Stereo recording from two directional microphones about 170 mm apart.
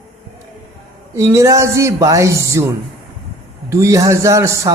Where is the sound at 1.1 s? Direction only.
15° right (ahead or behind).